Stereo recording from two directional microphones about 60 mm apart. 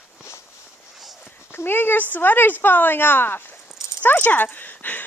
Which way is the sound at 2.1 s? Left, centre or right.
Left.